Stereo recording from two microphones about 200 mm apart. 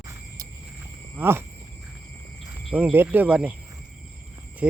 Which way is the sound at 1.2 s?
10° right (ahead or behind).